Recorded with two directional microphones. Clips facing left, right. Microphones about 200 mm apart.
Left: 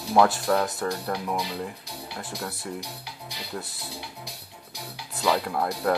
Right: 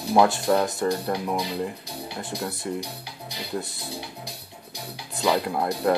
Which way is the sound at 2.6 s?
5° right (ahead or behind).